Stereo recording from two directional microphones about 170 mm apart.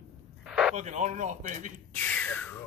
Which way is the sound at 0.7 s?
45° right (ahead or behind).